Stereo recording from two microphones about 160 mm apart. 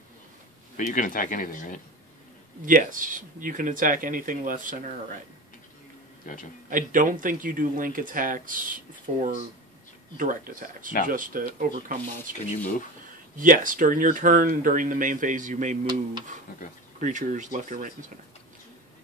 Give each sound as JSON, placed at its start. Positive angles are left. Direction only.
{"t": 0.7, "sound": "speech", "side_deg": 55}
{"t": 2.6, "sound": "speech", "side_deg": -55}
{"t": 6.7, "sound": "speech", "side_deg": -55}